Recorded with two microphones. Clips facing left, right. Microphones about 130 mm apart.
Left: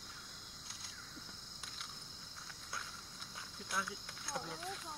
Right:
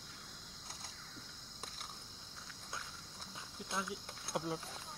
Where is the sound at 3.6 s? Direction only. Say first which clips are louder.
Right 1 dB; 25° right (ahead or behind).